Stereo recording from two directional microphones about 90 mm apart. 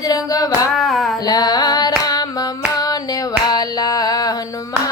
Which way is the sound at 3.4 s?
50° left (ahead or behind).